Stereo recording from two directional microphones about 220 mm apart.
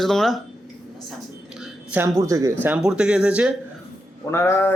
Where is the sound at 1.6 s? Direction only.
10° right (ahead or behind).